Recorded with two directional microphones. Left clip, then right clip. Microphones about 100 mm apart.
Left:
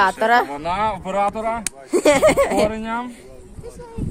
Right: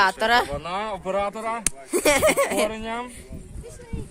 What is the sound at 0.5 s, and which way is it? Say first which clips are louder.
Speech: left 7 dB; 25° right (ahead or behind).